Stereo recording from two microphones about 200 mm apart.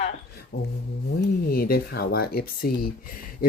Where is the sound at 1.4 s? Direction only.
50° left (ahead or behind).